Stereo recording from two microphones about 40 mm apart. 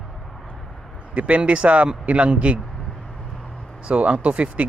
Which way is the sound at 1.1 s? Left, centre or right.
Right.